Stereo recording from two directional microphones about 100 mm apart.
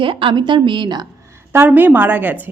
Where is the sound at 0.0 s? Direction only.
60° right (ahead or behind).